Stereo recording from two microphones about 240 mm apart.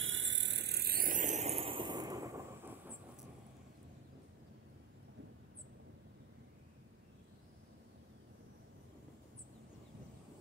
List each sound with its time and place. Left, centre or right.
0.0 s vehicle: right; by 2.9 s centre